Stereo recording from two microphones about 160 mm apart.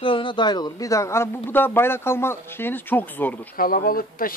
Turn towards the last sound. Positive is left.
turn(degrees=65)  # may be behind; listen again after turning